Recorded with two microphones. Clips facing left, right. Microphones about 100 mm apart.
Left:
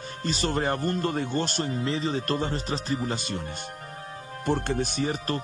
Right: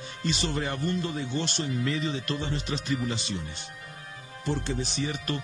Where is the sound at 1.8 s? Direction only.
30° left (ahead or behind).